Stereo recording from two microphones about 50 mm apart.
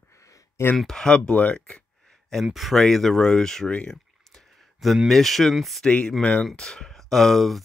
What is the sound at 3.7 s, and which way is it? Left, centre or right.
Speech, left.